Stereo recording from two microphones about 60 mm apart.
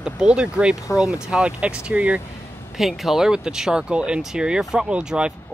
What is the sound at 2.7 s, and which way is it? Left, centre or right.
Speech, centre.